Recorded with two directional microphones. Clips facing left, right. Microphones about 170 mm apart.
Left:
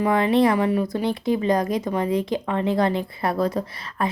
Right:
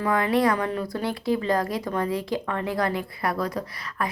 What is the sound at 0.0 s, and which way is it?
Speech, 25° left (ahead or behind).